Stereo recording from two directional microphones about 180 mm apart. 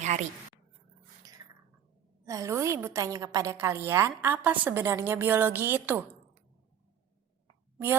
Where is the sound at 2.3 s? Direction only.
15° right (ahead or behind).